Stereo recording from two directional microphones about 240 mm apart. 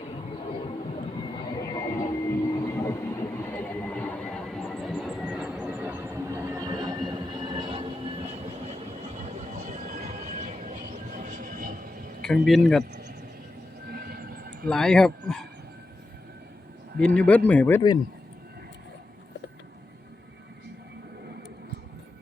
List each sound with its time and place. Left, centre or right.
1.5 s vehicle: centre; by 8.7 s right
9.6 s train: right
12.2 s speech: centre
12.9 s a sound: right
14.7 s speech: centre
17.2 s speech: centre